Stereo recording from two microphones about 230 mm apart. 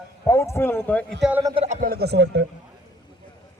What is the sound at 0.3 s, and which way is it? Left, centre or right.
Speech, centre.